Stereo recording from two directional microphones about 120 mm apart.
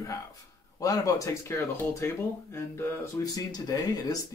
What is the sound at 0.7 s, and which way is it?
Speech, 30° left (ahead or behind).